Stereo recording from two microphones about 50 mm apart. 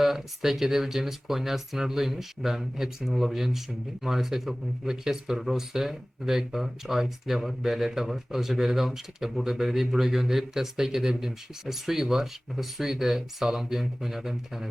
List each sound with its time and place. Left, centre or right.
0.0 s speech: centre